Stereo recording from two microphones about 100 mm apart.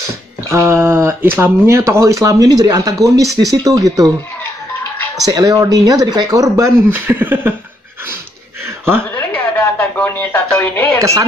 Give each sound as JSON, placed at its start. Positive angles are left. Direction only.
{"t": 0.5, "sound": "speech", "side_deg": -25}
{"t": 5.2, "sound": "speech", "side_deg": -40}
{"t": 8.6, "sound": "a sound", "side_deg": -25}
{"t": 9.1, "sound": "speech", "side_deg": 20}